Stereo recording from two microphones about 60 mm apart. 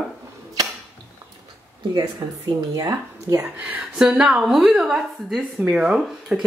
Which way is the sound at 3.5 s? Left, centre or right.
Right.